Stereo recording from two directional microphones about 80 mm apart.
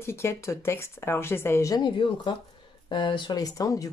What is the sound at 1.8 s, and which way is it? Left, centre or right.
Speech, left.